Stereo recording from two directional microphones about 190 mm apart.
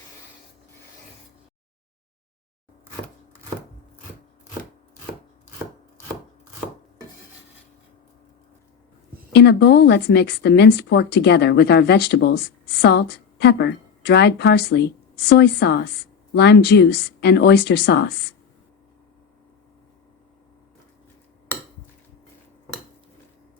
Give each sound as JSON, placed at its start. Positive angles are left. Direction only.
{"t": 9.3, "sound": "a woman's voice", "side_deg": 60}